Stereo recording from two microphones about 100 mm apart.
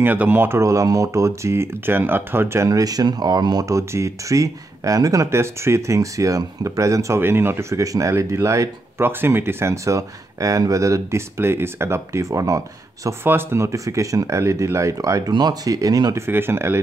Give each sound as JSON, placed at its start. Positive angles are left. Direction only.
{"t": 0.0, "sound": "speech", "side_deg": -20}
{"t": 13.2, "sound": "speech", "side_deg": -20}
{"t": 16.3, "sound": "speech", "side_deg": -25}